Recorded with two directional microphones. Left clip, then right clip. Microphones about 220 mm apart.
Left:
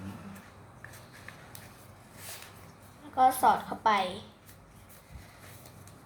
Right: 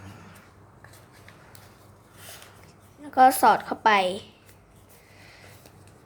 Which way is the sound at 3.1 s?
50° right (ahead or behind).